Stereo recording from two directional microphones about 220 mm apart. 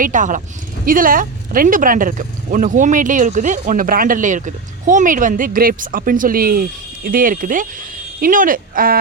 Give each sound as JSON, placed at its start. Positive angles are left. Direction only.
{"t": 0.0, "sound": "speech", "side_deg": -35}